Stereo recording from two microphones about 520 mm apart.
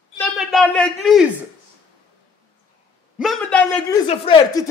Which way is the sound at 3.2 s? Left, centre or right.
Centre.